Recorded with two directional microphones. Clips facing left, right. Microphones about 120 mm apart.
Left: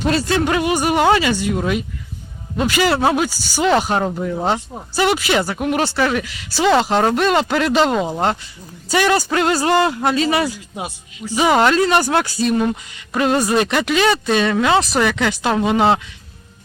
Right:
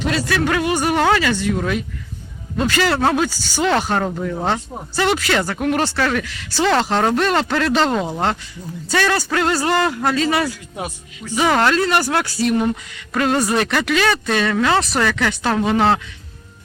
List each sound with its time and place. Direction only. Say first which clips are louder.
0.2 s speech: left 1 dB; 25° left (ahead or behind)